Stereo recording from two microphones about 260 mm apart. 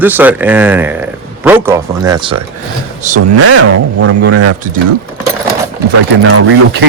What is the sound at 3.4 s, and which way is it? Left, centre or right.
Speech, right.